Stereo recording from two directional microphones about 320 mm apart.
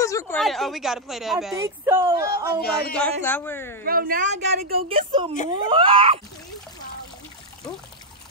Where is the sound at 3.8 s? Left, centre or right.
Right.